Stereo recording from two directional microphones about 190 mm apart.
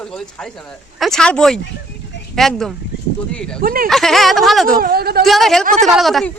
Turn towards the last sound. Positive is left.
turn(degrees=0)  # may be behind; listen again after turning